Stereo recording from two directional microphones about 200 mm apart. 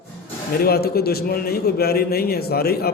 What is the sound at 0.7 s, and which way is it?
A man's voice, 50° left (ahead or behind).